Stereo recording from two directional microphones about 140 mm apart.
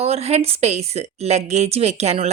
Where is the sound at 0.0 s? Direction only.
50° right (ahead or behind).